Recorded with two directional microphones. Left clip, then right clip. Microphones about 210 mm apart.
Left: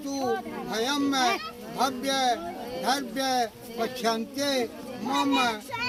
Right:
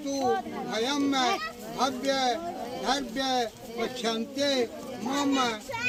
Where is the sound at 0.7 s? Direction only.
35° left (ahead or behind).